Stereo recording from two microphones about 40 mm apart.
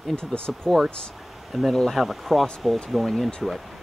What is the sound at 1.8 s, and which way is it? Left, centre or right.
Speech, centre.